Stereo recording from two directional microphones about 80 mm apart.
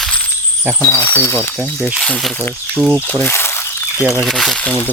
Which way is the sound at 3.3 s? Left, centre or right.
Left.